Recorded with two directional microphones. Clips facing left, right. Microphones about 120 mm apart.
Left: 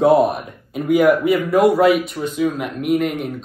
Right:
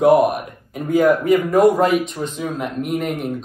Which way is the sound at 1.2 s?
45° right (ahead or behind).